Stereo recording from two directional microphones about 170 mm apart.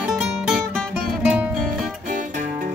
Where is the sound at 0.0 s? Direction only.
5° right (ahead or behind).